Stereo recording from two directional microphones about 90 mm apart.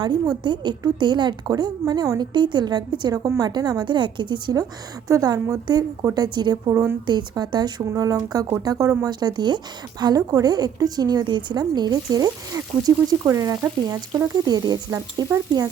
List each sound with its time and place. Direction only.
0.0 s a woman's voice: 55° right (ahead or behind)
5.0 s a woman's voice: 40° right (ahead or behind)
7.1 s a woman's voice: 55° right (ahead or behind)
8.6 s frying: 45° right (ahead or behind)
9.0 s a woman's voice: 50° right (ahead or behind)
13.2 s frying: 40° right (ahead or behind)
14.4 s a woman's voice: 45° right (ahead or behind)